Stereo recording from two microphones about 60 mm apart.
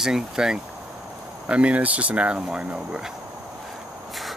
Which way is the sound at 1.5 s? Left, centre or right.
Right.